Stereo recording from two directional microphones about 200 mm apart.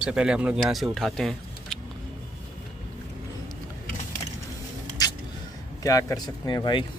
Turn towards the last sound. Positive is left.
turn(degrees=20)  # may be behind; listen again after turning